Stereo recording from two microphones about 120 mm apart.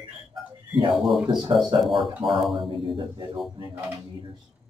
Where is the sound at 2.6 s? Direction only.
45° right (ahead or behind).